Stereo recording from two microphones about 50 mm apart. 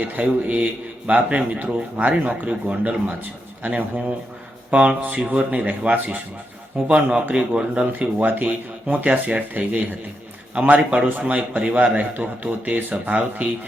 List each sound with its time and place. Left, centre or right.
0.0 s a man's voice: right